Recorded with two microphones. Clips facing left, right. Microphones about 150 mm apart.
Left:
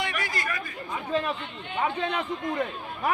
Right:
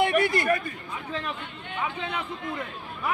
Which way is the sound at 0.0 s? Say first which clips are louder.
Right 9 dB; 55° right (ahead or behind).